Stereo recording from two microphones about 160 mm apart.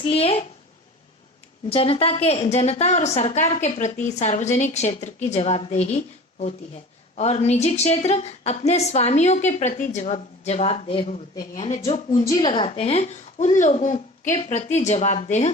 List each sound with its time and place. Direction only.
0.0 s a woman's voice: 40° left (ahead or behind)
1.7 s a woman's voice: 35° left (ahead or behind)
12.2 s a woman's voice: 25° left (ahead or behind)
12.5 s a woman's voice: 35° left (ahead or behind)